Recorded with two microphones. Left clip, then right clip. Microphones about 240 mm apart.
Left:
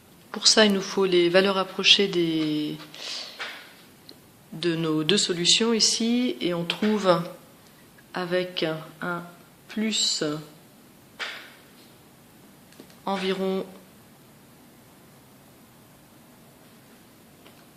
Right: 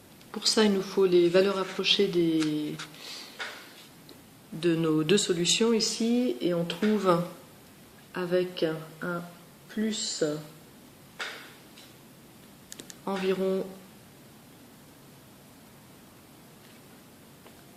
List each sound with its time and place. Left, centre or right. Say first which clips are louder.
0.3 s a man's voice: left 6 dB; left
4.6 s a man's voice: left 1 dB; centre; by 10.3 s left
13.1 s a man's voice: left 2 dB; left